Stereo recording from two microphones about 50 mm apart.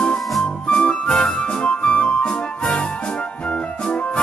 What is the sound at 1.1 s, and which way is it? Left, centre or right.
Music, centre.